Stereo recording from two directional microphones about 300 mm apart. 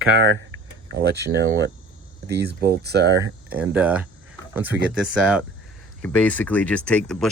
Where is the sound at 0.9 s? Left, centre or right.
Right.